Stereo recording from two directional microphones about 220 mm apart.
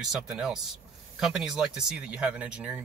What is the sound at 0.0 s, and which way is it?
Speech, centre (ahead or behind).